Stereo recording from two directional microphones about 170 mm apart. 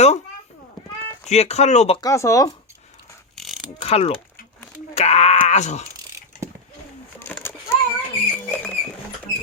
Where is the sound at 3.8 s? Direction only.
40° left (ahead or behind).